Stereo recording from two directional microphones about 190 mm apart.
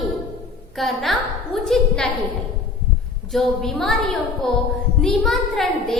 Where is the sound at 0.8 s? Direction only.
Centre (ahead or behind).